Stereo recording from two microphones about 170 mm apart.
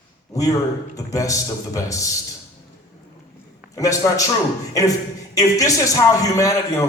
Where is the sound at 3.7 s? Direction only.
20° left (ahead or behind).